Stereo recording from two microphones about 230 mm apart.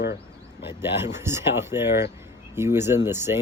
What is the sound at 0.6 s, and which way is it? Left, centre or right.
Speech, centre.